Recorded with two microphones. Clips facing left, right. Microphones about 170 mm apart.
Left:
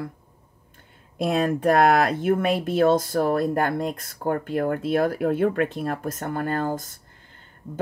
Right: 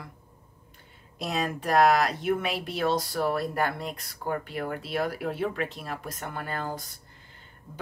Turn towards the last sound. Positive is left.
turn(degrees=45)  # may be behind; listen again after turning